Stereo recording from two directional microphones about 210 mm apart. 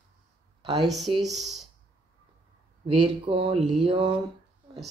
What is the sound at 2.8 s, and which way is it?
Speech, 25° right (ahead or behind).